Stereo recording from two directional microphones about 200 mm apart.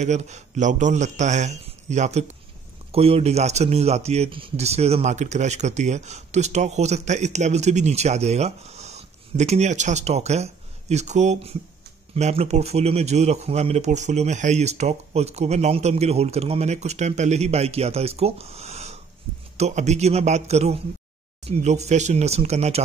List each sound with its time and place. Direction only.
0.0 s speech: 35° right (ahead or behind)